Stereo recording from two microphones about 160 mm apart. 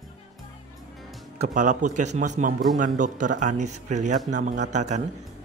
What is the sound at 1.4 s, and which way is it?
Speech, 50° right (ahead or behind).